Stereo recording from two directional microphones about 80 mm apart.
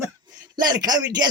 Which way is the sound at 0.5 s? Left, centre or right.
Right.